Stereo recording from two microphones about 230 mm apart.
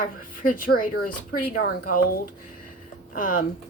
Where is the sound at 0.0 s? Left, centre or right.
Left.